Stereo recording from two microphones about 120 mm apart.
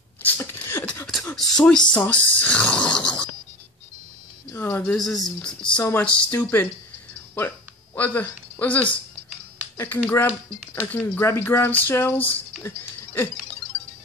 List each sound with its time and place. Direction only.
0.2 s beatboxing: 20° left (ahead or behind)
1.3 s speech: 5° left (ahead or behind)
4.5 s a sound: 20° left (ahead or behind)
4.9 s speech: centre (ahead or behind)
7.3 s a sound: 15° left (ahead or behind)
9.8 s speech: 20° left (ahead or behind)
12.6 s music: 20° left (ahead or behind)